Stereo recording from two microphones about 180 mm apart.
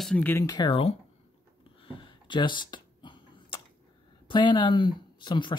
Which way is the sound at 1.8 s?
25° left (ahead or behind).